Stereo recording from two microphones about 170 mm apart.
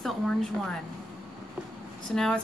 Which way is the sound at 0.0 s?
5° left (ahead or behind).